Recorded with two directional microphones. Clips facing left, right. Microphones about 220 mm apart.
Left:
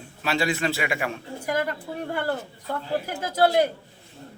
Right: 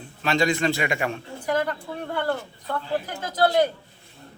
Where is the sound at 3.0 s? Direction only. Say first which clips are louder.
Left 3 dB; 10° left (ahead or behind).